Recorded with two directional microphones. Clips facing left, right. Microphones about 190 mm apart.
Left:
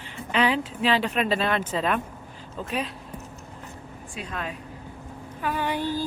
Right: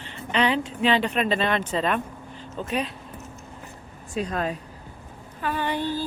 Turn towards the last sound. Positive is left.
turn(degrees=10)  # may be behind; listen again after turning